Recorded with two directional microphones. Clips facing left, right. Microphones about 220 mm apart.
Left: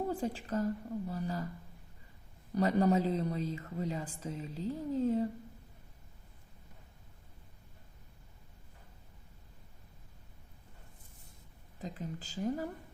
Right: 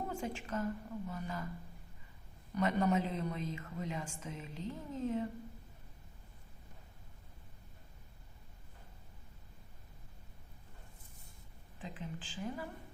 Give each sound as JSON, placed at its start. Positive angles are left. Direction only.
{"t": 0.1, "sound": "a woman's voice", "side_deg": 35}
{"t": 2.6, "sound": "a woman's voice", "side_deg": 35}
{"t": 11.8, "sound": "a woman's voice", "side_deg": 40}